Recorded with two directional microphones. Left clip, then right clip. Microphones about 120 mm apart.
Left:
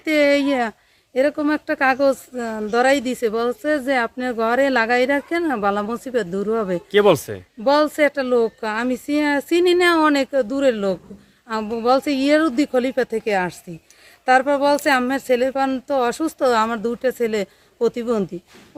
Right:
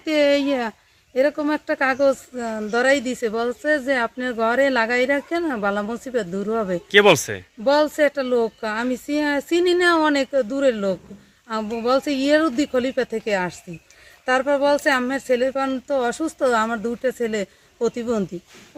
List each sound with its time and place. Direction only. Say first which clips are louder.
0.0 s speech: left 2 dB; 45° left (ahead or behind)
6.9 s speech: right 1 dB; 10° left (ahead or behind)
7.6 s speech: left 1 dB; 55° left (ahead or behind); by 18.3 s 35° left (ahead or behind)